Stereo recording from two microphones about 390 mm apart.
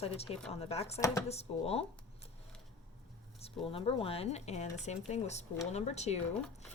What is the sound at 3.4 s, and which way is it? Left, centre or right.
Speech, centre.